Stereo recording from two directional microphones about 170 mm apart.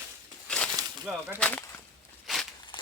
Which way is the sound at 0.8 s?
20° right (ahead or behind).